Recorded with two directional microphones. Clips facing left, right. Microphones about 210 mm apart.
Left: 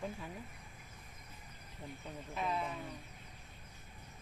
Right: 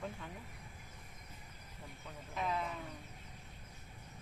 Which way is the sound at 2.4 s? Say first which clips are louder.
Even; 5° left (ahead or behind).